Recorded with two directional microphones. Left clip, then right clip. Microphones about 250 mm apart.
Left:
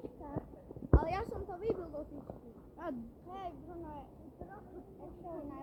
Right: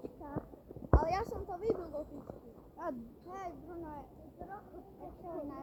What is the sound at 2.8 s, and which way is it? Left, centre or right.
Speech, centre.